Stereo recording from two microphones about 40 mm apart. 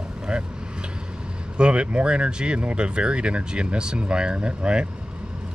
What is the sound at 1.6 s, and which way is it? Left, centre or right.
Speech, right.